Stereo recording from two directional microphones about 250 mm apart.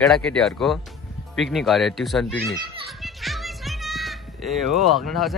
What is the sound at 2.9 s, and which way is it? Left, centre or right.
Music, centre.